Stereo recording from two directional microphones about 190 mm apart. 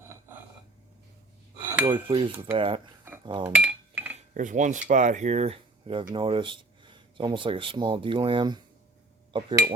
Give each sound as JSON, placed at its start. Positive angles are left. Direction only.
{"t": 0.0, "sound": "a sound", "side_deg": -10}
{"t": 1.8, "sound": "cutlery", "side_deg": -25}
{"t": 3.5, "sound": "dishes", "side_deg": -10}
{"t": 4.4, "sound": "speech", "side_deg": -40}
{"t": 9.3, "sound": "cutlery", "side_deg": -25}